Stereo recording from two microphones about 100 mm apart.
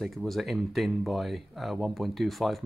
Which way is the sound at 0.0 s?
Centre (ahead or behind).